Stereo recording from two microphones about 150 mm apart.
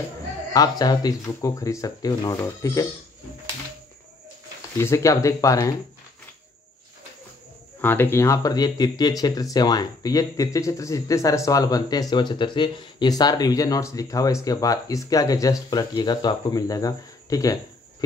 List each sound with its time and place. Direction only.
0.5 s speech: 25° left (ahead or behind)
4.7 s speech: 20° left (ahead or behind)
7.8 s speech: 15° left (ahead or behind)